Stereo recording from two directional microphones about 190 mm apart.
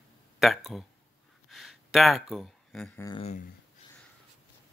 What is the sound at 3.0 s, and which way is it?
Speech, 25° left (ahead or behind).